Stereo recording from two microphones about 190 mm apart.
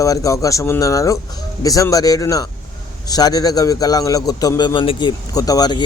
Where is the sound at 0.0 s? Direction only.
15° left (ahead or behind).